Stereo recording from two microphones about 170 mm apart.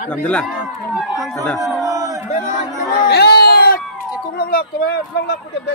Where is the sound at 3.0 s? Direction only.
70° left (ahead or behind).